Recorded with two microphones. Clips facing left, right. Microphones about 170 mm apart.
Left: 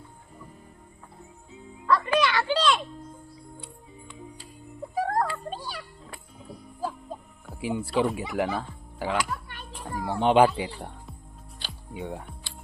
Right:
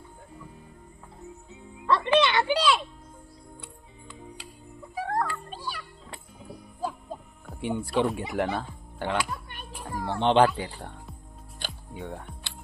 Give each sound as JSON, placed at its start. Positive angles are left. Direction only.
{"t": 1.9, "sound": "a child's voice", "side_deg": -25}
{"t": 4.9, "sound": "music", "side_deg": 40}
{"t": 7.4, "sound": "speech", "side_deg": 5}
{"t": 9.5, "sound": "children playing", "side_deg": -20}
{"t": 9.8, "sound": "speech", "side_deg": 5}
{"t": 11.6, "sound": "music", "side_deg": -50}
{"t": 11.9, "sound": "speech", "side_deg": 15}